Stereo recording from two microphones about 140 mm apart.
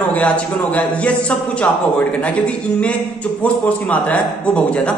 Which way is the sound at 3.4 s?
10° left (ahead or behind).